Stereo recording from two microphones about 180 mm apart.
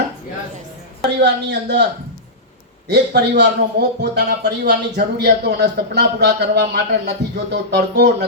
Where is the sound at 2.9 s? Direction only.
65° right (ahead or behind).